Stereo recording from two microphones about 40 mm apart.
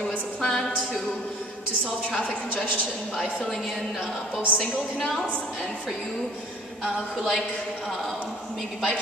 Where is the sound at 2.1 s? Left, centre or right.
Left.